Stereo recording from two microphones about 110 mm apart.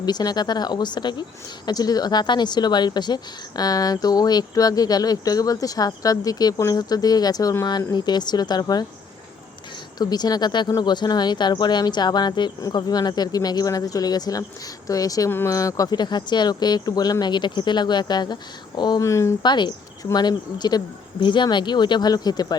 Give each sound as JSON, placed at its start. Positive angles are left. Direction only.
{"t": 0.0, "sound": "speech", "side_deg": 35}
{"t": 10.0, "sound": "speech", "side_deg": 35}
{"t": 15.3, "sound": "speech", "side_deg": 20}
{"t": 15.5, "sound": "speech", "side_deg": 30}
{"t": 19.0, "sound": "speech", "side_deg": 25}
{"t": 19.4, "sound": "speech", "side_deg": 40}